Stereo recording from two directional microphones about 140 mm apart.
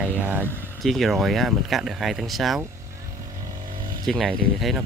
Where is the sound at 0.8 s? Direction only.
Centre (ahead or behind).